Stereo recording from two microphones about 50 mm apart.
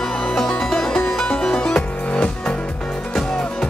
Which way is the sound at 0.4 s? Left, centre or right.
Centre.